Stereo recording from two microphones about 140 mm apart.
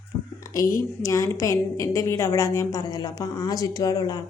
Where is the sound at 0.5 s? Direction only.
25° left (ahead or behind).